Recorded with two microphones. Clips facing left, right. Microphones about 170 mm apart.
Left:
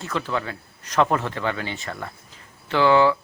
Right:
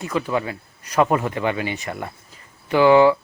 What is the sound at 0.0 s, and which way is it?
Speech, 10° right (ahead or behind).